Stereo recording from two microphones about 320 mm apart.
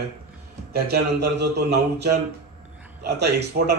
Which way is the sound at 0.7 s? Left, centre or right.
Right.